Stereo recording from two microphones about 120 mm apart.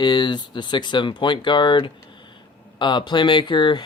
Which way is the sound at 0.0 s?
35° left (ahead or behind).